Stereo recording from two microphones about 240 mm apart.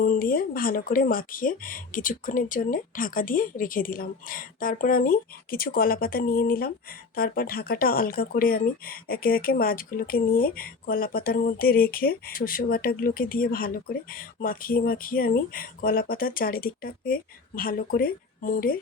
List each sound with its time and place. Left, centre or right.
0.0 s speech: left